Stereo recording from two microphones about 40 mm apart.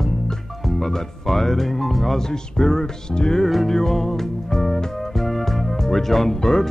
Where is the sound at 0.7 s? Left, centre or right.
Centre.